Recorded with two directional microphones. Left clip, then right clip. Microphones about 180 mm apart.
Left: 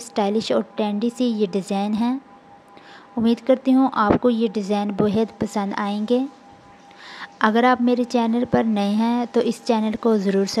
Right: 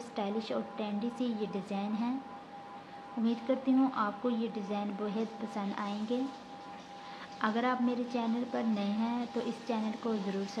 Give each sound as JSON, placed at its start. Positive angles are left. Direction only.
{"t": 0.0, "sound": "a woman's voice", "side_deg": 50}
{"t": 3.3, "sound": "a woman's voice", "side_deg": 50}